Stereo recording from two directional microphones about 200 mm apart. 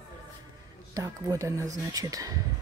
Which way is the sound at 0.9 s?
15° right (ahead or behind).